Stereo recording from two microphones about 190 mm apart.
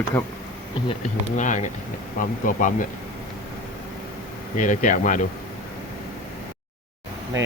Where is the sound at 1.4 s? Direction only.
40° left (ahead or behind).